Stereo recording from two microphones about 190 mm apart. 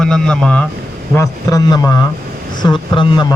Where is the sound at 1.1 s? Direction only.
15° left (ahead or behind).